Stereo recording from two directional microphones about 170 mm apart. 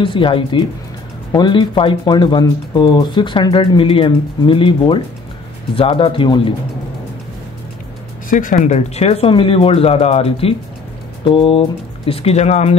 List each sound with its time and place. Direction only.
0.0 s speech: 30° left (ahead or behind)
8.3 s speech: 50° left (ahead or behind)
8.6 s speech: 40° left (ahead or behind)